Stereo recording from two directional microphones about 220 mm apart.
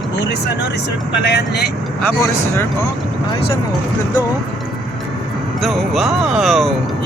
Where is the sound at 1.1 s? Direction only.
50° left (ahead or behind).